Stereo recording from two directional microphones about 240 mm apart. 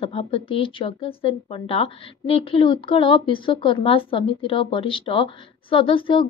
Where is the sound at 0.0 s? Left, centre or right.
Left.